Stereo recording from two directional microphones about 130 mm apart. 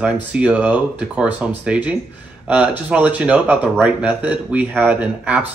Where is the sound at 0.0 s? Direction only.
10° right (ahead or behind).